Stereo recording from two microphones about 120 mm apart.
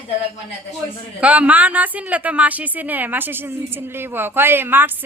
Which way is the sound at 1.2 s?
10° right (ahead or behind).